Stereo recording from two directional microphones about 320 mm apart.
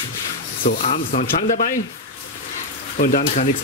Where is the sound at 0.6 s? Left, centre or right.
Left.